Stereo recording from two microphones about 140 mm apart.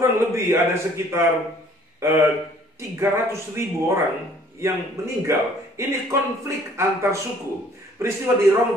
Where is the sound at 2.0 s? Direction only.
20° right (ahead or behind).